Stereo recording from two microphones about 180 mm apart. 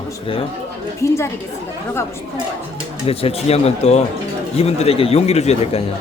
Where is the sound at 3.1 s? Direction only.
30° left (ahead or behind).